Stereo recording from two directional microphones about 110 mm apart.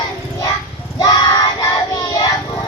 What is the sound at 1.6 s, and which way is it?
Child singing, 30° left (ahead or behind).